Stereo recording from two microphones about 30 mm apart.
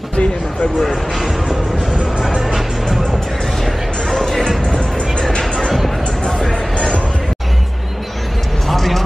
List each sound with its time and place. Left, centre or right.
0.1 s a sound: left
2.3 s music: centre
3.6 s music: centre
8.6 s basketball bounce: centre